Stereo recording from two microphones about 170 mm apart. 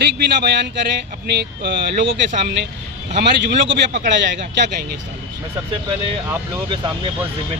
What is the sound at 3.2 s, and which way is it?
Speech, 90° right.